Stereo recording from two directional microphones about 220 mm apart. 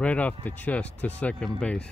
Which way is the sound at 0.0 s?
5° left (ahead or behind).